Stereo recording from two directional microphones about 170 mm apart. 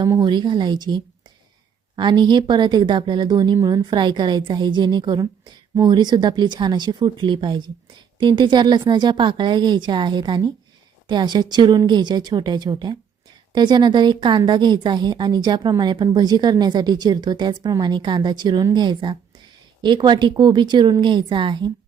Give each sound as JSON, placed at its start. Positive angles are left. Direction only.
{"t": 0.0, "sound": "a woman's voice", "side_deg": -25}